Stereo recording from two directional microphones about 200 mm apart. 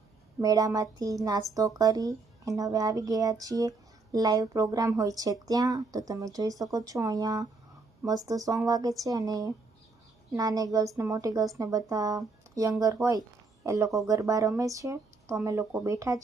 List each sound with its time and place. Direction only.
0.4 s speech: 20° right (ahead or behind)